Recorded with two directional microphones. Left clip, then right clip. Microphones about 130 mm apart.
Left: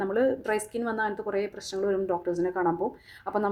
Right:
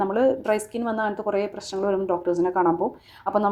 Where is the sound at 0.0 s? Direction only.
5° right (ahead or behind).